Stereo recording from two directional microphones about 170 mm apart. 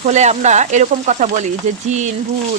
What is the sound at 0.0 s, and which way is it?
Speech, 40° right (ahead or behind).